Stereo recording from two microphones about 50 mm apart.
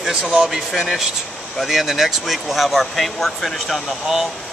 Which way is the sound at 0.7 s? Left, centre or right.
Centre.